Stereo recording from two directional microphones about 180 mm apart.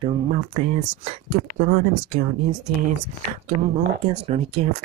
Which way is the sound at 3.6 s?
35° right (ahead or behind).